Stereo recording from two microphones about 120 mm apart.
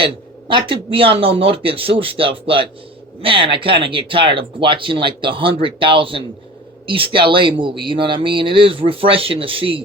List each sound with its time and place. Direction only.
0.0 s speech: 45° right (ahead or behind)